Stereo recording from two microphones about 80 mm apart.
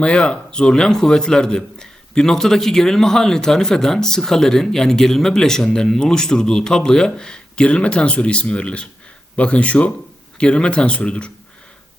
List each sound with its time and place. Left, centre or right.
0.0 s a man's voice: centre